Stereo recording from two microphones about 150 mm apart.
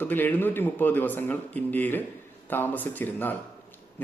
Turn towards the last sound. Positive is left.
turn(degrees=10)  # may be behind; listen again after turning